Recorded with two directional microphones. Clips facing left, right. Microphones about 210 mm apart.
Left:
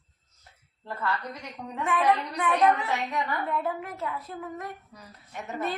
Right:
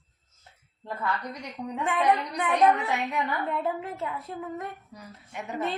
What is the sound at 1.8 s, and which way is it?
Speech, 20° right (ahead or behind).